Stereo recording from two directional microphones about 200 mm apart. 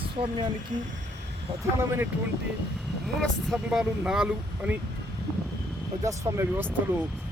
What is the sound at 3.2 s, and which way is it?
Speech, centre (ahead or behind).